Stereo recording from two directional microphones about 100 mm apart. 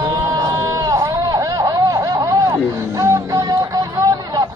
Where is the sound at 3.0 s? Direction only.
35° right (ahead or behind).